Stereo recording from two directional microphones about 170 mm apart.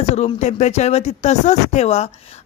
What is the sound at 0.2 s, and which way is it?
A woman's voice, 40° left (ahead or behind).